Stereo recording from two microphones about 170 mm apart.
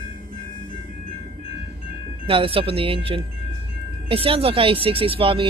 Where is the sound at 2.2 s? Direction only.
30° right (ahead or behind).